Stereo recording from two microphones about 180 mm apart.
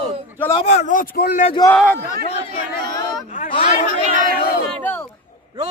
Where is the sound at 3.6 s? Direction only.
40° left (ahead or behind).